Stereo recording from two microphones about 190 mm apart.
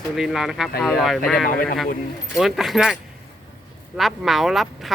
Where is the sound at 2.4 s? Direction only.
Centre (ahead or behind).